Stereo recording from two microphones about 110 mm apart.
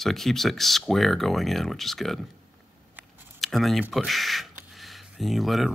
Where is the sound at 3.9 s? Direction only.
Centre (ahead or behind).